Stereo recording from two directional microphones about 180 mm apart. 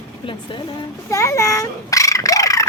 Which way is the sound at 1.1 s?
15° left (ahead or behind).